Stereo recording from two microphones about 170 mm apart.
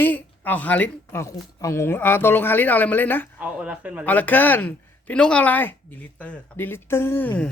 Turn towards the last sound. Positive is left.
turn(degrees=10)  # may be behind; listen again after turning